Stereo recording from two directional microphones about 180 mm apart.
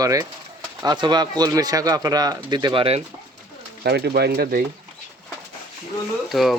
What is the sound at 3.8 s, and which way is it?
Speech, 60° right (ahead or behind).